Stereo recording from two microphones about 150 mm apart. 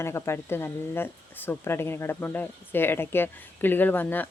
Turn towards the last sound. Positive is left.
turn(degrees=10)  # may be behind; listen again after turning